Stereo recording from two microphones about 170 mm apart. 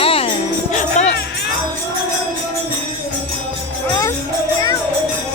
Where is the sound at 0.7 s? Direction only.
45° left (ahead or behind).